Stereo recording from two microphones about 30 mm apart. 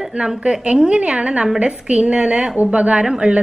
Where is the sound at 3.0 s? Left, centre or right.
Right.